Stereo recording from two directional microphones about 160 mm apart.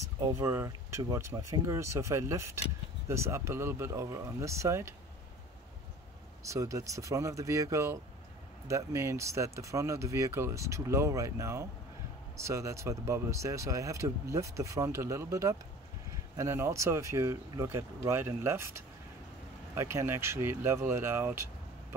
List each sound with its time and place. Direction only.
0.0 s speech: 20° right (ahead or behind)
6.4 s speech: 20° right (ahead or behind)
19.7 s speech: 15° right (ahead or behind)